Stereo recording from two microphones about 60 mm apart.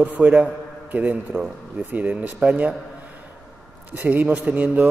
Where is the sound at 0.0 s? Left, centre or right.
Right.